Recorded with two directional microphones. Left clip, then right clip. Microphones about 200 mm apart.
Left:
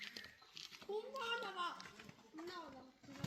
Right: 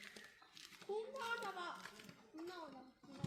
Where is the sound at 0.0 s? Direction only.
40° right (ahead or behind).